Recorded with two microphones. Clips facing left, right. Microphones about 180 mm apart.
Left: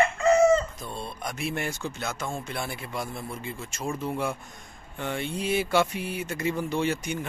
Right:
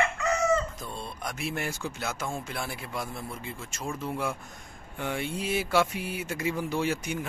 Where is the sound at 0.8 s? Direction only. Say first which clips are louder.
Left 2 dB; centre (ahead or behind).